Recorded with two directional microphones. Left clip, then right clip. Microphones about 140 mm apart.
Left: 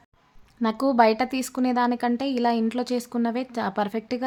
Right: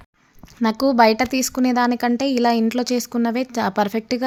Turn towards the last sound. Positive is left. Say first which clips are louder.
# right 6 dB
turn(degrees=-20)  # may be behind; listen again after turning